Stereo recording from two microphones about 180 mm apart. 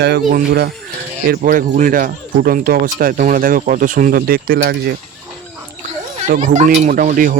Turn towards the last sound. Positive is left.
turn(degrees=-50)  # may be behind; listen again after turning